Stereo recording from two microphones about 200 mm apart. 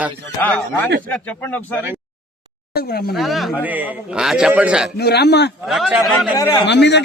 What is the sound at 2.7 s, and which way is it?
Speech, 50° left (ahead or behind).